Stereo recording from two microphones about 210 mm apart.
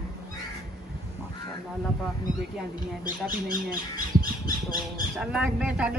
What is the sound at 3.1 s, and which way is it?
Speech, 45° right (ahead or behind).